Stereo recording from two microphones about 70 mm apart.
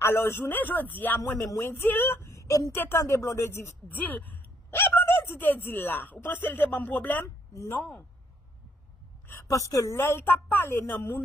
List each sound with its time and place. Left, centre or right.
0.0 s speech: left
1.4 s a woman's voice: left
2.3 s a sound: left
3.0 s speech: left
4.1 s speech: left
7.2 s speech: left
9.3 s a woman's voice: left
9.9 s a woman's voice: left